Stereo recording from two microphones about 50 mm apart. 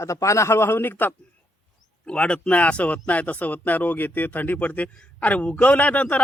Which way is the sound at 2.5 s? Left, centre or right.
Left.